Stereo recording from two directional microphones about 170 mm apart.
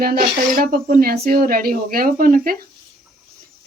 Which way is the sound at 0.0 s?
60° right (ahead or behind).